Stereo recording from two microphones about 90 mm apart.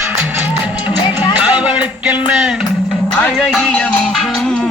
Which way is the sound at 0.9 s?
50° left (ahead or behind).